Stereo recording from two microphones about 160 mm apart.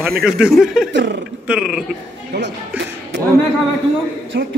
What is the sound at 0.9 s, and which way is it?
Speech, 90° right.